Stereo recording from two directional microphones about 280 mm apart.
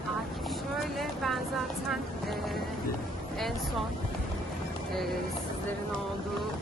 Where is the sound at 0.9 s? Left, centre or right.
Centre.